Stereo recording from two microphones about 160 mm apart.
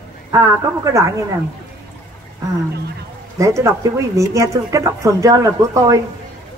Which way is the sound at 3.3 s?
20° right (ahead or behind).